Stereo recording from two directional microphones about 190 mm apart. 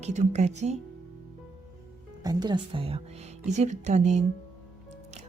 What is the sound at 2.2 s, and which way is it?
Speech, 20° right (ahead or behind).